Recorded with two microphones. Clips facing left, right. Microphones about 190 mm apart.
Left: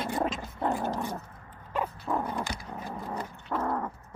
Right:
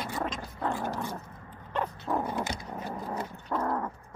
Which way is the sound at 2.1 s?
Centre (ahead or behind).